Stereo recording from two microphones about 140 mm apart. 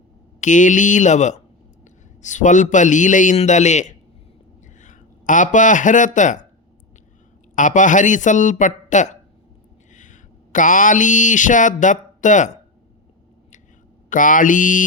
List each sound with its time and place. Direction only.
0.3 s a man's voice: 65° left (ahead or behind)
7.5 s speech: 65° left (ahead or behind)
9.9 s a sound: 65° left (ahead or behind)
14.1 s mantra: 70° left (ahead or behind)